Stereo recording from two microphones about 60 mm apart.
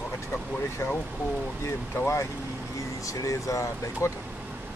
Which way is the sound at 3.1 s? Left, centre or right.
Left.